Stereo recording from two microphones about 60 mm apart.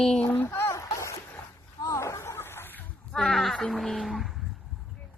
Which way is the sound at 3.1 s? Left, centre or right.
Centre.